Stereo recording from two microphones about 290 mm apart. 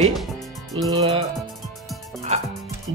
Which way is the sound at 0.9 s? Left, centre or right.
Centre.